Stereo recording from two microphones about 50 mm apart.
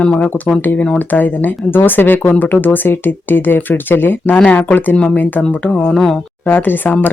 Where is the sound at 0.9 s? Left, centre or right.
Left.